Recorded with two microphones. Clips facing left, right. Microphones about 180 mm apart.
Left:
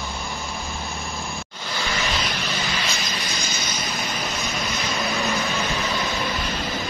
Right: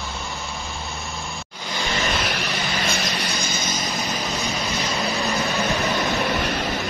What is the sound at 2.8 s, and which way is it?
Vehicle, 70° right (ahead or behind).